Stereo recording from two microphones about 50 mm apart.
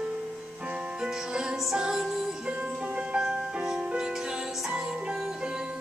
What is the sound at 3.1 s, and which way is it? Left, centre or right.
Music, right.